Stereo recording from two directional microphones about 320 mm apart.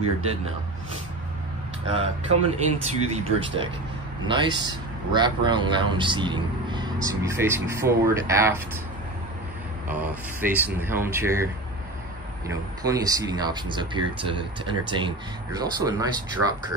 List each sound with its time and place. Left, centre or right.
1.9 s speech: centre
9.8 s speech: centre
12.4 s speech: centre